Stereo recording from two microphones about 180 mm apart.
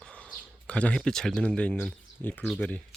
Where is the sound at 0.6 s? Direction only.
5° left (ahead or behind).